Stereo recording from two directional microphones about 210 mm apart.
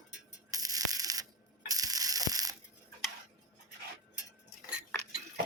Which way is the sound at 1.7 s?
15° right (ahead or behind).